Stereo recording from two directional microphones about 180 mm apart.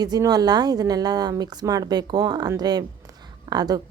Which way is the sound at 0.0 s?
20° right (ahead or behind).